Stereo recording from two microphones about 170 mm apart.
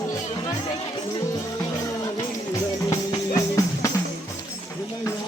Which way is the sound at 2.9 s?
20° left (ahead or behind).